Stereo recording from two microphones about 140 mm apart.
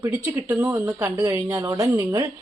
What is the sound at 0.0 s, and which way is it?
Speech, 20° right (ahead or behind).